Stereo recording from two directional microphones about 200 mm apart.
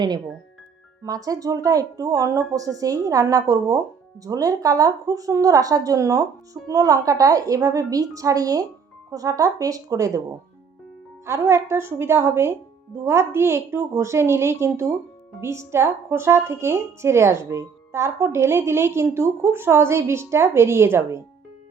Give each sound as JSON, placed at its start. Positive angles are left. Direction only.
{"t": 1.0, "sound": "a woman's voice", "side_deg": -20}
{"t": 11.3, "sound": "a woman's voice", "side_deg": -15}